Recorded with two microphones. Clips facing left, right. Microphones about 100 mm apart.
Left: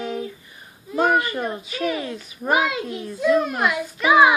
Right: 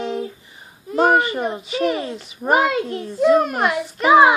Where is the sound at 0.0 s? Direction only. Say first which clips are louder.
Right 3 dB; 20° right (ahead or behind).